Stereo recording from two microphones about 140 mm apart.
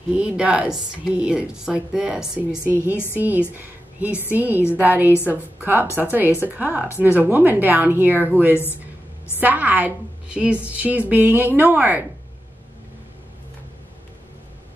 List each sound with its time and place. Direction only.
0.1 s a woman's voice: 10° right (ahead or behind)
2.6 s speech: 15° left (ahead or behind)
3.2 s a woman's voice: 10° right (ahead or behind)